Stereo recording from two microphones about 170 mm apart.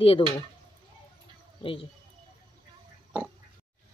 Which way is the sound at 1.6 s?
30° left (ahead or behind).